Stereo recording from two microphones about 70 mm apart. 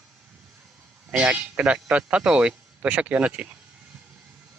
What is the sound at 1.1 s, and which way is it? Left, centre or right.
Speech, centre.